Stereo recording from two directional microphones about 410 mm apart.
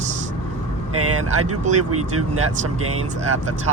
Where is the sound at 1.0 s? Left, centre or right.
Right.